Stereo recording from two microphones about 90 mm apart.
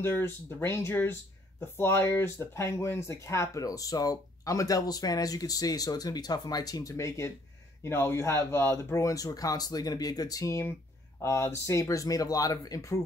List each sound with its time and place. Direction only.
0.0 s speech: 25° left (ahead or behind)